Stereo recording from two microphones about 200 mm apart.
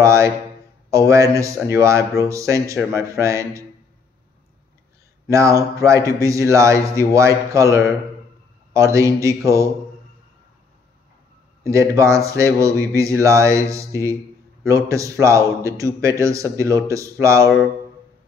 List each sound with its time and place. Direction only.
0.0 s a man's voice: 15° right (ahead or behind)
5.3 s a man's voice: 15° right (ahead or behind)
11.6 s a man's voice: 15° right (ahead or behind)